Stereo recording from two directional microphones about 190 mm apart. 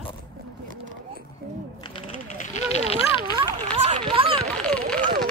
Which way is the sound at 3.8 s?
25° right (ahead or behind).